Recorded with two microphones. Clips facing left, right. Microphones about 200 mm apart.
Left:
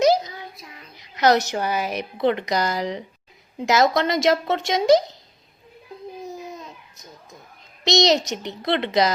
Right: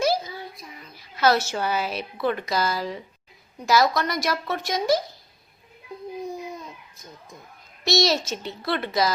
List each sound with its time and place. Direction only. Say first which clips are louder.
0.0 s child singing: left 5 dB; 20° left (ahead or behind)
0.9 s a woman's voice: left 3 dB; 20° left (ahead or behind)
6.9 s a sound: even; 20° left (ahead or behind)
7.9 s speech: left 3 dB; 20° left (ahead or behind)